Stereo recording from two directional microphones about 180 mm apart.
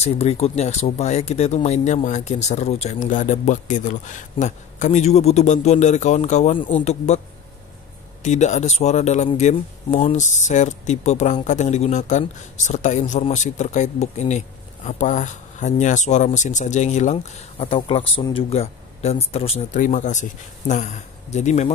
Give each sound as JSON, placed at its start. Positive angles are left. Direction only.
{"t": 0.0, "sound": "speech", "side_deg": 35}
{"t": 8.2, "sound": "speech", "side_deg": 40}